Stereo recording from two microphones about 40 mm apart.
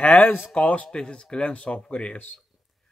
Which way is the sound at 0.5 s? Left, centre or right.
Left.